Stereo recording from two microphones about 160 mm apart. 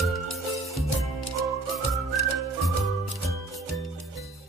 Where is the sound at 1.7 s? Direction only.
Centre (ahead or behind).